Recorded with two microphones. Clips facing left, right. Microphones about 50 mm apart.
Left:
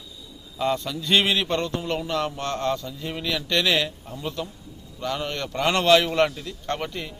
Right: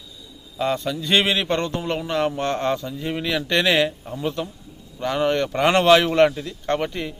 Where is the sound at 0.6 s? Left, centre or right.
Centre.